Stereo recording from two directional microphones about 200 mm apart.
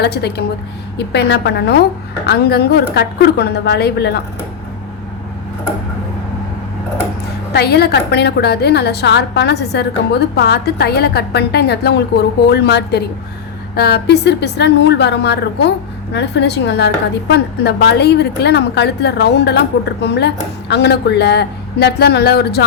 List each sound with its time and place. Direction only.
0.0 s a woman's voice: 55° left (ahead or behind)
7.5 s a woman's voice: 55° left (ahead or behind)